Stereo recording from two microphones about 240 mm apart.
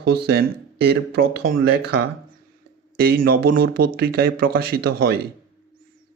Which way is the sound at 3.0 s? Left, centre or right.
Right.